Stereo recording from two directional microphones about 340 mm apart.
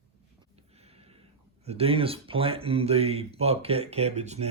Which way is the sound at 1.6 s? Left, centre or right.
Centre.